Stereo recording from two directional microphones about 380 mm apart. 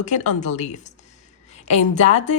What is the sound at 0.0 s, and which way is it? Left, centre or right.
A woman's voice, centre.